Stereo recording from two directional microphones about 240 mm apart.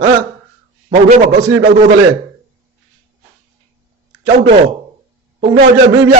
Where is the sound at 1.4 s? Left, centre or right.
Right.